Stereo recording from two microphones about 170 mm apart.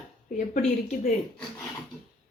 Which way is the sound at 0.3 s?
50° left (ahead or behind).